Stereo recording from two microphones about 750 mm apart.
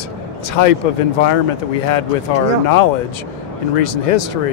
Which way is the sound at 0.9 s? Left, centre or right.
Left.